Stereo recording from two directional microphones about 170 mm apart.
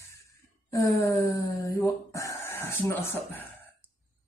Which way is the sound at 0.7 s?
15° left (ahead or behind).